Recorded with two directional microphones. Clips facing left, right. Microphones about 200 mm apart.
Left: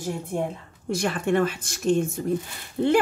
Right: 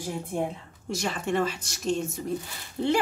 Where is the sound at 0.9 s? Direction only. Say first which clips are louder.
Left 5 dB; 55° left (ahead or behind).